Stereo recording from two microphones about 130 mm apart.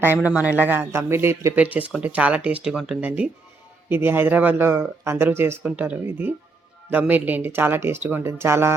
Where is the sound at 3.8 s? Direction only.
15° right (ahead or behind).